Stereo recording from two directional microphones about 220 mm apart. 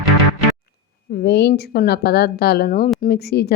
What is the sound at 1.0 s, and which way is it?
A woman's voice, 50° left (ahead or behind).